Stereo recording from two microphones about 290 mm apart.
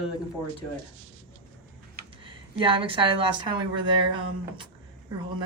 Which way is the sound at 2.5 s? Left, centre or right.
Centre.